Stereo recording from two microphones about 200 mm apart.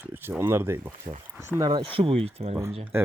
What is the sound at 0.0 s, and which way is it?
Speech, 10° right (ahead or behind).